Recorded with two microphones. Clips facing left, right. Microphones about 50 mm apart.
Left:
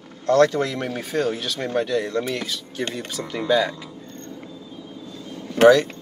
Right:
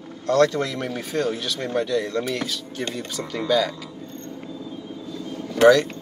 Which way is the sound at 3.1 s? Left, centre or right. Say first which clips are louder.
Left 1 dB; centre.